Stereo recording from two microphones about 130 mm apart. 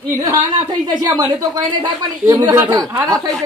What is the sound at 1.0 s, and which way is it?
Speech, 30° right (ahead or behind).